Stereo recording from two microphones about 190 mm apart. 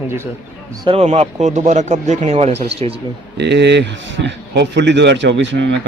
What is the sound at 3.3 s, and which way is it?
A man's voice, 65° right (ahead or behind).